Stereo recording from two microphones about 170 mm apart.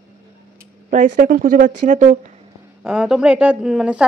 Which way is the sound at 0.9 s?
50° right (ahead or behind).